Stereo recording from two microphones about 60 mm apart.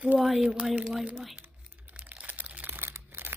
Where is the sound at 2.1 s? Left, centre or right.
Right.